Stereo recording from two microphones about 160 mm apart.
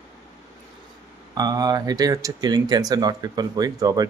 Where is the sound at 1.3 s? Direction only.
25° right (ahead or behind).